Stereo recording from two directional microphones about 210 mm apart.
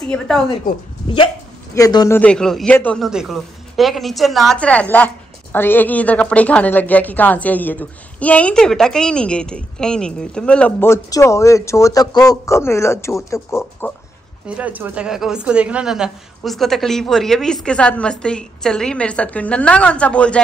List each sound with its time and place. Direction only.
0.1 s a woman's voice: 5° left (ahead or behind)
1.0 s speech: 25° left (ahead or behind)
2.1 s speech: 5° left (ahead or behind)
14.5 s a woman's voice: 5° right (ahead or behind)